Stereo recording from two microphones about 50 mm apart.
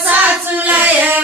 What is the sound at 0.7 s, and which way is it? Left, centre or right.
Child singing, right.